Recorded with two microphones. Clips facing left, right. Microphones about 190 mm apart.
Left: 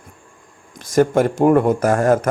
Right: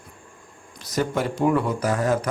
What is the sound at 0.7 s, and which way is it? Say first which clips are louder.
Speech: left 9 dB; 50° left (ahead or behind).